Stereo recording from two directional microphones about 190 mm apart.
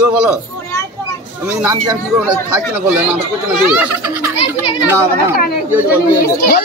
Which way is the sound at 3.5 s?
5° right (ahead or behind).